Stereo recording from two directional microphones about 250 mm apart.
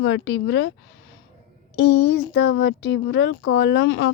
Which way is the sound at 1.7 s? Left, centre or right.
Left.